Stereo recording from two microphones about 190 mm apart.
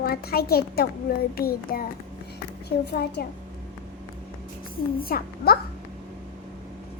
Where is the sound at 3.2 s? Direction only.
55° left (ahead or behind).